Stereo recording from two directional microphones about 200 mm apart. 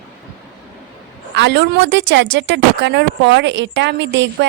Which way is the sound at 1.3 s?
60° right (ahead or behind).